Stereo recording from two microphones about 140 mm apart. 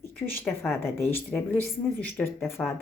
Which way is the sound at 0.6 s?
15° left (ahead or behind).